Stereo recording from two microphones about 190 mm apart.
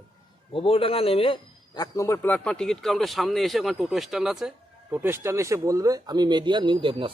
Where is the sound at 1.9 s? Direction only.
15° left (ahead or behind).